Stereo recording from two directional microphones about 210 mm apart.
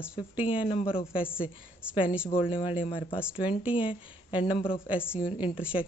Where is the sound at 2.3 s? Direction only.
25° left (ahead or behind).